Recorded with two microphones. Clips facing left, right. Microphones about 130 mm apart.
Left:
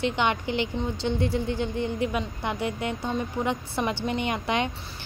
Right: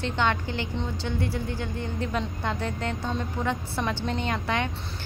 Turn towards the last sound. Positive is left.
turn(degrees=15)  # may be behind; listen again after turning